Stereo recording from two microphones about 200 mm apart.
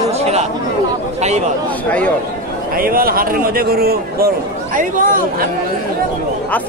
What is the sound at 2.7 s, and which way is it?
A man's voice, 45° right (ahead or behind).